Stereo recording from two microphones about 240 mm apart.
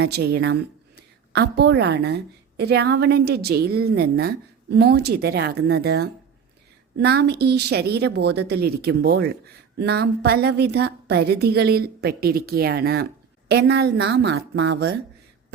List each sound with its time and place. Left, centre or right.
0.0 s a woman's voice: right